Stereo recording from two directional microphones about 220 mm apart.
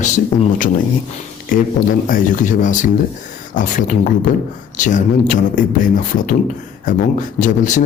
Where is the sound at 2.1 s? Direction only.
35° left (ahead or behind).